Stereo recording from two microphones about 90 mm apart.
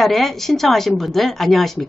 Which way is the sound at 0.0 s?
Centre (ahead or behind).